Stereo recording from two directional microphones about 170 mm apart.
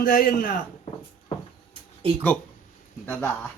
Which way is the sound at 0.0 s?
55° left (ahead or behind).